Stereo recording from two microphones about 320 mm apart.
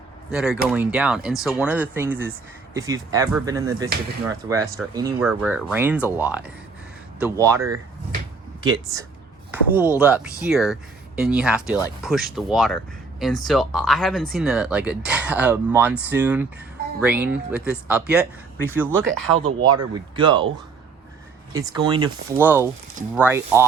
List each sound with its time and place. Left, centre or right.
0.3 s speech: centre
9.5 s speech: centre
19.5 s speech: right
19.9 s speech: centre
21.5 s speech: centre